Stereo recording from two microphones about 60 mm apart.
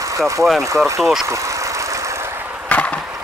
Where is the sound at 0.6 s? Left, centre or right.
Right.